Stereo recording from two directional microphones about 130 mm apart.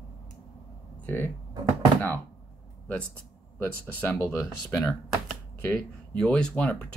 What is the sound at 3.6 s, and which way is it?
Speech, 15° left (ahead or behind).